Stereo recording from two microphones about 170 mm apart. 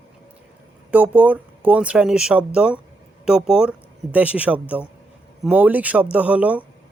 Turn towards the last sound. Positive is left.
turn(degrees=-5)  # may be behind; listen again after turning